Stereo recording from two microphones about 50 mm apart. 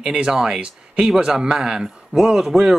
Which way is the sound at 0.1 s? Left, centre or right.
Centre.